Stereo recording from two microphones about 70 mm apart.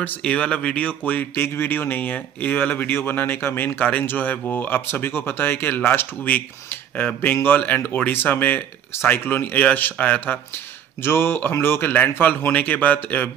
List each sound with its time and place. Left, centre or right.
0.0 s speech: left
11.0 s speech: left